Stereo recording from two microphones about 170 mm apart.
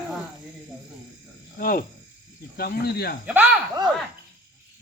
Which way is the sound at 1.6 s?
55° left (ahead or behind).